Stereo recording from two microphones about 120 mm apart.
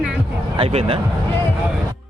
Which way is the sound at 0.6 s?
50° right (ahead or behind).